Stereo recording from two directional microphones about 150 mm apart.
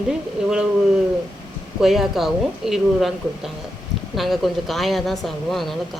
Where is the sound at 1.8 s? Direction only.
Centre (ahead or behind).